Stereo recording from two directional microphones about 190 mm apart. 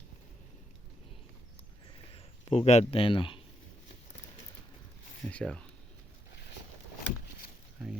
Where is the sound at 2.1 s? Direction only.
35° left (ahead or behind).